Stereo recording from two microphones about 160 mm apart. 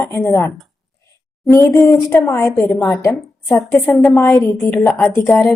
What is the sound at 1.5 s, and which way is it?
A woman's voice, 15° left (ahead or behind).